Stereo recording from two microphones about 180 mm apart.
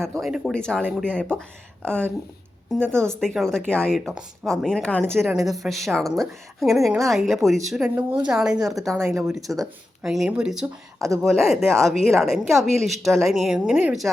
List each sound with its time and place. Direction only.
0.2 s speech: 5° right (ahead or behind)
7.9 s speech: 25° right (ahead or behind)
8.3 s speech: 5° right (ahead or behind)